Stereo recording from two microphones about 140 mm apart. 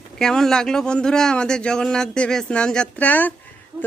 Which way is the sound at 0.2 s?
5° left (ahead or behind).